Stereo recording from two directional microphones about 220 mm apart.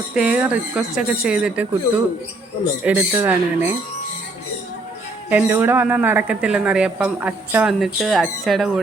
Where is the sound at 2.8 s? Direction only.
10° right (ahead or behind).